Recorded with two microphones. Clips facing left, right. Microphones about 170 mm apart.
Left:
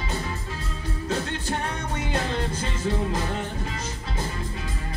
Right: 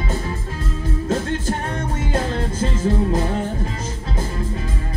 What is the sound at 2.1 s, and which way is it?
Music, 45° right (ahead or behind).